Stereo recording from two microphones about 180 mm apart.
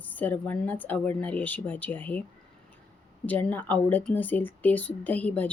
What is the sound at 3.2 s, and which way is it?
Speech, 10° left (ahead or behind).